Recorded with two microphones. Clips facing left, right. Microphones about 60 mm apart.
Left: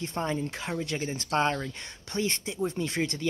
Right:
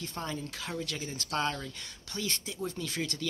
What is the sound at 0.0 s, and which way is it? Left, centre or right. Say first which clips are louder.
Speech: left 7 dB; left.